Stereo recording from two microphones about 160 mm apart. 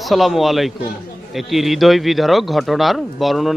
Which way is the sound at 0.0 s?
Centre (ahead or behind).